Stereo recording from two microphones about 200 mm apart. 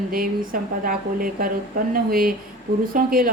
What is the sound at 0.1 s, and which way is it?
Speech, 45° right (ahead or behind).